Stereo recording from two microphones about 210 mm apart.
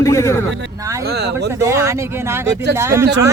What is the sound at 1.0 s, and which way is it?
Speech, 50° right (ahead or behind).